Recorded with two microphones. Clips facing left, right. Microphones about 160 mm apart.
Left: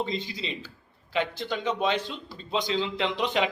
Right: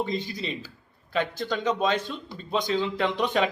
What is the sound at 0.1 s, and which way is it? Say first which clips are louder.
Speech: right 2 dB; 50° right (ahead or behind).